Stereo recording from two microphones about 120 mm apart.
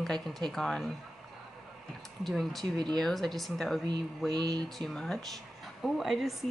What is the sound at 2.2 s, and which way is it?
Speech, centre (ahead or behind).